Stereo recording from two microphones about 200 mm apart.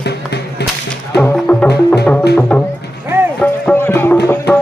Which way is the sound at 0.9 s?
5° left (ahead or behind).